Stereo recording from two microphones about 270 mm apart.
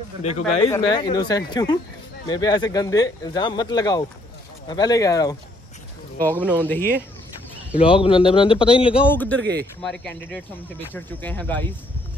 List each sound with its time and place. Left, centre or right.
0.2 s a man's voice: left
6.3 s speech: centre
7.8 s a man's voice: centre
9.1 s speech: centre
9.4 s speech: right
9.8 s speech: centre